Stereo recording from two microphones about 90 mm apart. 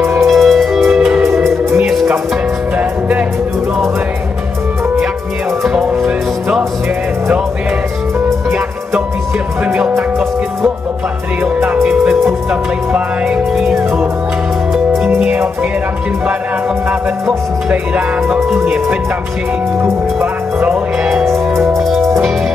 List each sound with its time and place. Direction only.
0.2 s music: centre (ahead or behind)
2.8 s music: 15° right (ahead or behind)
5.6 s music: 5° right (ahead or behind)
9.7 s music: 20° right (ahead or behind)
11.4 s music: 15° right (ahead or behind)
15.0 s music: 20° right (ahead or behind)
17.6 s music: 15° right (ahead or behind)
19.8 s speech: 20° right (ahead or behind)
20.7 s music: 10° right (ahead or behind)